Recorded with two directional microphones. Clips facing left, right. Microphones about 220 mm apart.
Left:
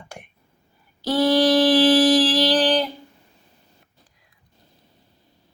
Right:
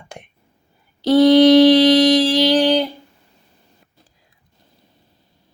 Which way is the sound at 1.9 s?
15° right (ahead or behind).